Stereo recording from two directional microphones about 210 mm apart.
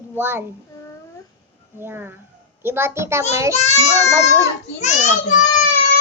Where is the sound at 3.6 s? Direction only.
30° left (ahead or behind).